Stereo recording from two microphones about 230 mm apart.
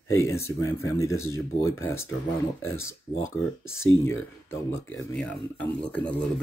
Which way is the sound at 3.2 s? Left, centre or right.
Left.